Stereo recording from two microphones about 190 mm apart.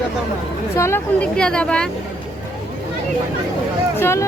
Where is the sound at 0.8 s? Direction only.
10° left (ahead or behind).